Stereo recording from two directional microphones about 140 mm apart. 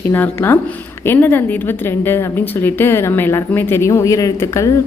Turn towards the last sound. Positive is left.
turn(degrees=20)  # may be behind; listen again after turning